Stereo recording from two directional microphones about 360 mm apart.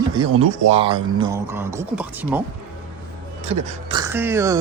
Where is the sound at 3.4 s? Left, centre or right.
Centre.